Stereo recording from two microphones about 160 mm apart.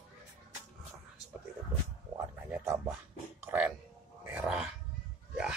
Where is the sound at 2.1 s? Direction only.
15° right (ahead or behind).